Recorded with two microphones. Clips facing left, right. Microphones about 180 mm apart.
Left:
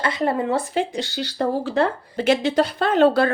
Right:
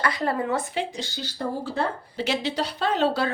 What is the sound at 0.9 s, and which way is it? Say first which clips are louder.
Speech: left 8 dB; 70° left (ahead or behind).